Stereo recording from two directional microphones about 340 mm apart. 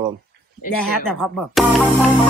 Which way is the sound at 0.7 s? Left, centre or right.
Centre.